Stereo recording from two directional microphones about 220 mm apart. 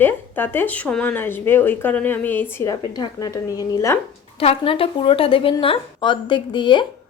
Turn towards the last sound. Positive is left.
turn(degrees=20)  # may be behind; listen again after turning